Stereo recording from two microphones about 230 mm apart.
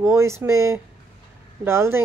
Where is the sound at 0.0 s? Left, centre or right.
Centre.